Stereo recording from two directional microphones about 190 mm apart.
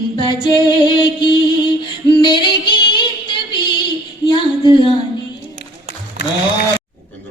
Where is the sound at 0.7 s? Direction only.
25° left (ahead or behind).